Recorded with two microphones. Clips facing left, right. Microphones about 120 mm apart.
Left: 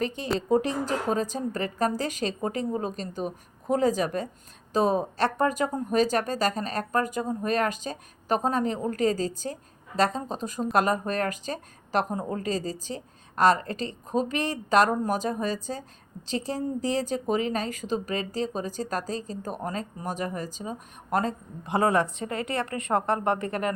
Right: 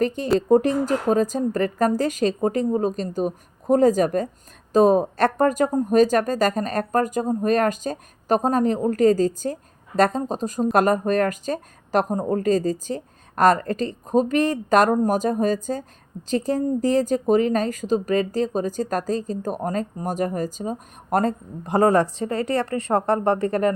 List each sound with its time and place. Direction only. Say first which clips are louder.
0.3 s a woman's voice: right 7 dB; 45° right (ahead or behind)